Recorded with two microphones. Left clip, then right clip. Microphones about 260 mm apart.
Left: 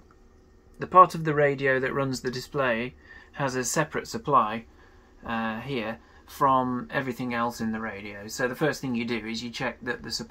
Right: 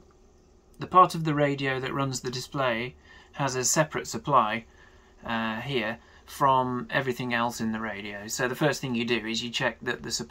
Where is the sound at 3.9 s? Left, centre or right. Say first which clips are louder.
Left 1 dB; centre.